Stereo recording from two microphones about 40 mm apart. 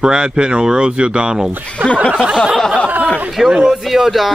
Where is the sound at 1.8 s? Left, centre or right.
Left.